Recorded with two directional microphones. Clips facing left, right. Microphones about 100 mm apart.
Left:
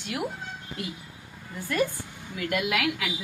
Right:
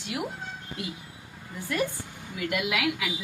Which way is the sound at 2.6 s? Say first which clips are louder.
Left 1 dB; 15° right (ahead or behind).